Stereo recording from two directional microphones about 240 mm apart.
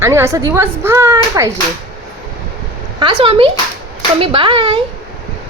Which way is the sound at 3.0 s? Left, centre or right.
Right.